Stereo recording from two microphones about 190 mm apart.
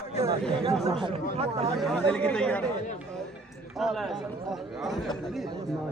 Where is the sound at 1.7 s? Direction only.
5° left (ahead or behind).